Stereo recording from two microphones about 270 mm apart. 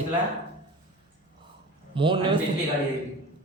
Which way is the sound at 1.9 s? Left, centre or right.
Centre.